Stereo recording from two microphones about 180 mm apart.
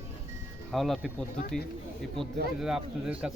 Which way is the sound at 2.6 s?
5° right (ahead or behind).